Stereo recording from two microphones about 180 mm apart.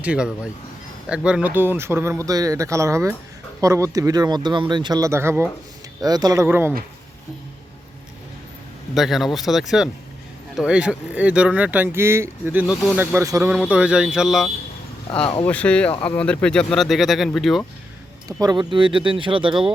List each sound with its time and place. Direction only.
0.0 s speech: 5° right (ahead or behind)
9.0 s speech: centre (ahead or behind)
15.2 s speech: 30° left (ahead or behind)
15.4 s speech: 5° left (ahead or behind)
18.3 s speech: 20° right (ahead or behind)